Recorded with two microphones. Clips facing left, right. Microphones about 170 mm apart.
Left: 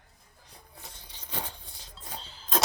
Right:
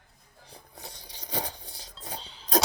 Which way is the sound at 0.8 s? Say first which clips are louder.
Right 4 dB; 35° right (ahead or behind).